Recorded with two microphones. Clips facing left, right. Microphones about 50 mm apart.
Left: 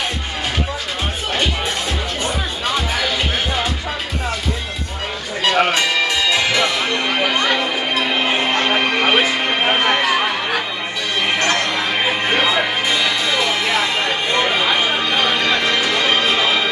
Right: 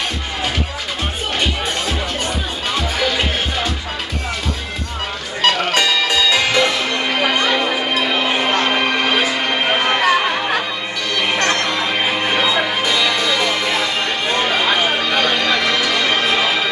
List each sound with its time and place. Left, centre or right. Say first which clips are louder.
5.5 s music: left 5 dB; left
7.5 s music: right 2 dB; centre
8.1 s a sound: even; centre
8.5 s music: even; centre
9.0 s music: left 2 dB; left
9.5 s music: even; centre
11.3 s music: even; centre
11.8 s music: even; centre
14.6 s a sound: right 1 dB; centre
15.0 s a sound: right 1 dB; centre
15.5 s music: even; left